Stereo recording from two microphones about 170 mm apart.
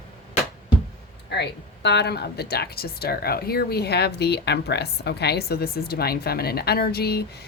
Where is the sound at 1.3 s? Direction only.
85° left.